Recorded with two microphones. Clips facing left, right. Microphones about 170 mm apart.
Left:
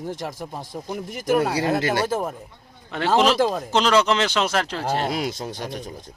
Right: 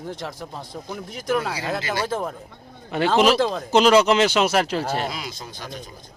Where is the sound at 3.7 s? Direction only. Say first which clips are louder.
Right 6 dB; 10° right (ahead or behind).